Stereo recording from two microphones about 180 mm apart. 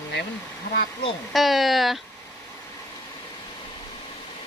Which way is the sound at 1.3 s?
Centre (ahead or behind).